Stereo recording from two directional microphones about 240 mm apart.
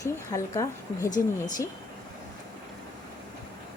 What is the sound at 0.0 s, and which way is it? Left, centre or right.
Speech, centre.